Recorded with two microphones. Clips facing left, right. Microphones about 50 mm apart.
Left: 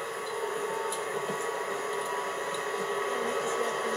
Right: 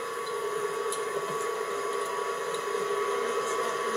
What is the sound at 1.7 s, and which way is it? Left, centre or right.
Printer, centre.